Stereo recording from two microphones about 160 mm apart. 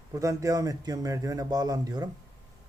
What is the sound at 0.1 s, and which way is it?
Speech, 20° right (ahead or behind).